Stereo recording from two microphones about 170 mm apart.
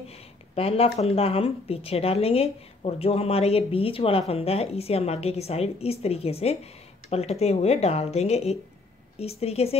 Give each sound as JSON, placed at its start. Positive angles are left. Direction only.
{"t": 0.6, "sound": "speech", "side_deg": 35}